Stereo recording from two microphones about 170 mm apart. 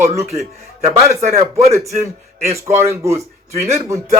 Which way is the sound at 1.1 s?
40° right (ahead or behind).